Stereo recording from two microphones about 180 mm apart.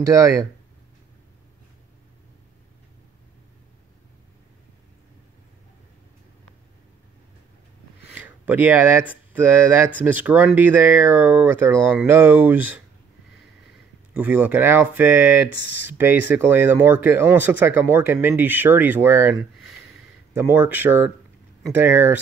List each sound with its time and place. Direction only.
0.0 s speech: 15° right (ahead or behind)
8.1 s a sound: 10° right (ahead or behind)
9.1 s speech: 10° right (ahead or behind)
14.1 s speech: 10° right (ahead or behind)
20.3 s speech: 10° right (ahead or behind)